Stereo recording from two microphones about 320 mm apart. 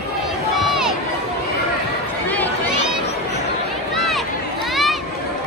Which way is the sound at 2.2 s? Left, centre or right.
Centre.